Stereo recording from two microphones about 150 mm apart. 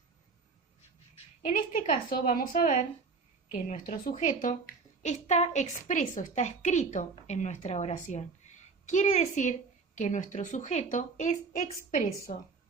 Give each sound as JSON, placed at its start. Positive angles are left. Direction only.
{"t": 1.4, "sound": "a woman's voice", "side_deg": 65}